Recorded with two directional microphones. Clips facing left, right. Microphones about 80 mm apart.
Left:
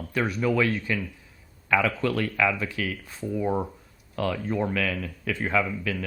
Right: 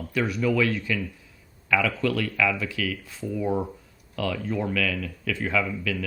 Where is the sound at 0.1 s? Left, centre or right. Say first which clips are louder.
Even; left.